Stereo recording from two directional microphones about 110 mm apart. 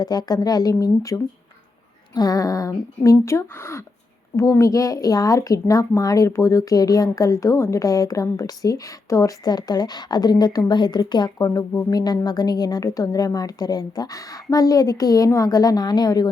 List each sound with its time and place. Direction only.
0.0 s speech: 35° left (ahead or behind)
11.3 s speech: 25° left (ahead or behind)
11.9 s speech: 35° left (ahead or behind)